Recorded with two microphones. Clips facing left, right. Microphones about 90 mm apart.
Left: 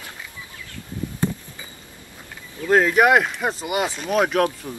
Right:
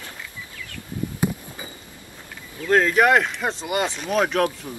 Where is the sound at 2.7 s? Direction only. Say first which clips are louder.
Left 1 dB; 5° left (ahead or behind).